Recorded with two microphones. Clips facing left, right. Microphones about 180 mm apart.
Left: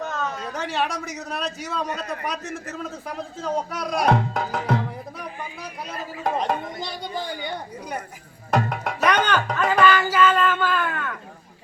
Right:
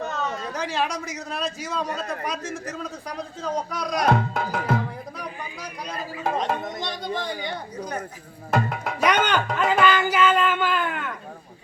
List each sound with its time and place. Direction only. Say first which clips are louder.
0.3 s a man's voice: even; centre (ahead or behind)
3.7 s music: even; 5° left (ahead or behind)
5.9 s a man's voice: left 1 dB; 5° right (ahead or behind)
8.5 s a man's voice: left 1 dB; centre (ahead or behind)
9.0 s speech: even; 15° right (ahead or behind)